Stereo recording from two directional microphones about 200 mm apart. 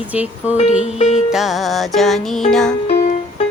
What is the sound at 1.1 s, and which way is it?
Music, centre (ahead or behind).